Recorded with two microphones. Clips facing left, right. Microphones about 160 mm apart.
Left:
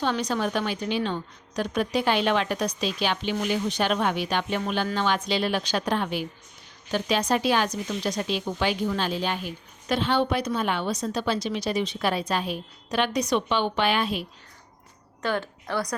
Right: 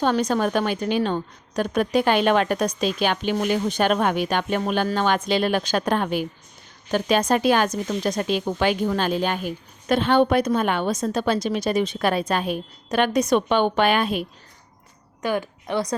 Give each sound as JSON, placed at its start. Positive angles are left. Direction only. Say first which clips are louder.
{"t": 0.0, "sound": "a woman's voice", "louder": "right 5 dB", "side_deg": -45}
{"t": 15.2, "sound": "a woman's voice", "louder": "right 3 dB", "side_deg": -10}